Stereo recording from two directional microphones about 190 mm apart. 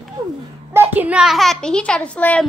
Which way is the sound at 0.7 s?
10° right (ahead or behind).